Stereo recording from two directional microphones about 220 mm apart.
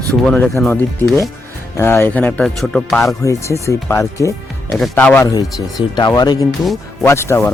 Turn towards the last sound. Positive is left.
turn(degrees=10)  # may be behind; listen again after turning